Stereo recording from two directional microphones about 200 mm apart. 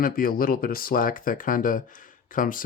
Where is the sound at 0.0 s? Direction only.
45° left (ahead or behind).